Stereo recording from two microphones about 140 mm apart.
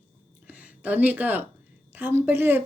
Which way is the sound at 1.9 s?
15° right (ahead or behind).